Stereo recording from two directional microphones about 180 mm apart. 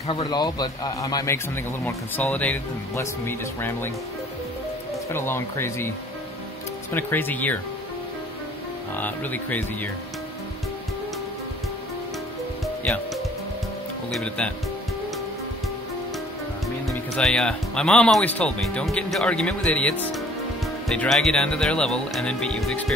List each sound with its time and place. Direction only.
0.0 s a man's voice: 30° left (ahead or behind); by 3.9 s 10° left (ahead or behind)
5.1 s speech: 15° left (ahead or behind)
6.9 s speech: 10° left (ahead or behind)
8.9 s speech: 10° left (ahead or behind)
12.8 s music: 5° left (ahead or behind)
14.1 s speech: 5° left (ahead or behind)
16.6 s speech: centre (ahead or behind)